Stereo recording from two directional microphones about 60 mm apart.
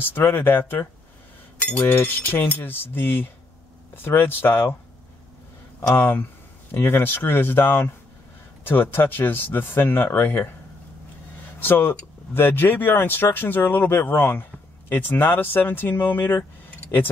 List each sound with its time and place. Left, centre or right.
0.0 s speech: left
5.9 s speech: left
11.6 s speech: left